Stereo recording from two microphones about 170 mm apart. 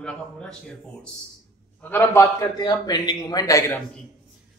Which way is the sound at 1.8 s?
10° left (ahead or behind).